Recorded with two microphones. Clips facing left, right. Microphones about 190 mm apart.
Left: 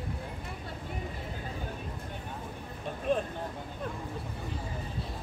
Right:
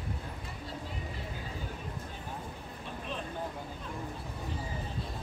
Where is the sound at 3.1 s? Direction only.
50° left (ahead or behind).